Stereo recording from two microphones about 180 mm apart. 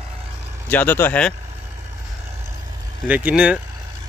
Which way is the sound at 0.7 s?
10° left (ahead or behind).